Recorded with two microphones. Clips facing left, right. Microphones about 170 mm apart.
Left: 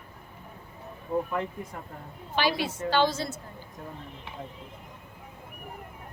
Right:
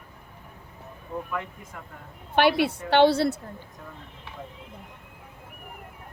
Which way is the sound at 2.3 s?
60° right (ahead or behind).